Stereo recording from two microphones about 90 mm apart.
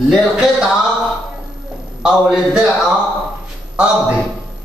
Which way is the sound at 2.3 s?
10° right (ahead or behind).